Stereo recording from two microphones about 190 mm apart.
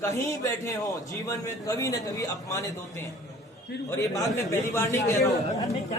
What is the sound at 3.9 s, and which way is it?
A man's voice, 15° left (ahead or behind).